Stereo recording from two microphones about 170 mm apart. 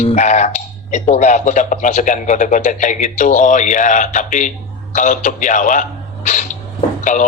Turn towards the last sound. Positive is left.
turn(degrees=50)  # may be behind; listen again after turning